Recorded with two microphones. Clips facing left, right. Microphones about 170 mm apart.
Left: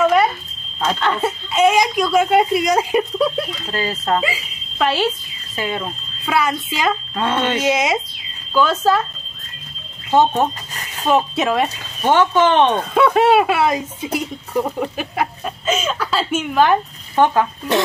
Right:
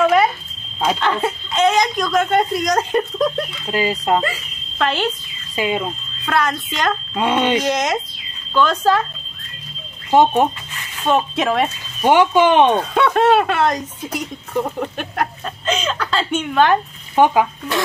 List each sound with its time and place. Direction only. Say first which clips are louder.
0.0 s a sound: even; centre (ahead or behind)
0.9 s speech: even; centre (ahead or behind)
3.7 s speech: right 3 dB; 15° right (ahead or behind)
4.2 s speech: even; 5° left (ahead or behind)
5.6 s speech: right 3 dB; 15° right (ahead or behind)
6.2 s speech: left 1 dB; 10° left (ahead or behind)
7.2 s speech: right 5 dB; 15° right (ahead or behind)
7.6 s speech: left 1 dB; 10° left (ahead or behind)
10.7 s a sound: left 2 dB; 40° left (ahead or behind)
11.1 s speech: left 1 dB; 5° left (ahead or behind)
12.0 s speech: right 1 dB; 15° right (ahead or behind)
12.9 s speech: left 1 dB; 5° left (ahead or behind)
17.2 s speech: right 1 dB; 10° right (ahead or behind)